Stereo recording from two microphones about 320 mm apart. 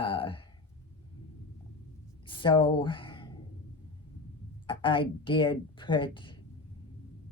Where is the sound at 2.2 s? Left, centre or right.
Centre.